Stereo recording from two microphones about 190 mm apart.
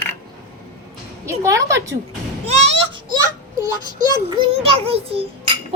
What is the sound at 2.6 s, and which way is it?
Children playing, 25° right (ahead or behind).